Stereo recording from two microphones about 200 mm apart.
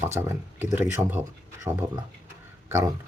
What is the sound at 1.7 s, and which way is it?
Speech, 25° right (ahead or behind).